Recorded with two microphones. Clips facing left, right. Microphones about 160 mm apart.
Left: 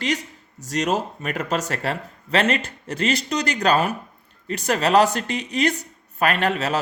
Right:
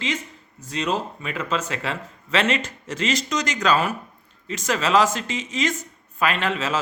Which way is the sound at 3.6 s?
60° left (ahead or behind).